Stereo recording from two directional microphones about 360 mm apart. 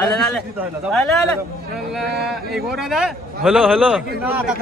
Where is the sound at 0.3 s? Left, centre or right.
Centre.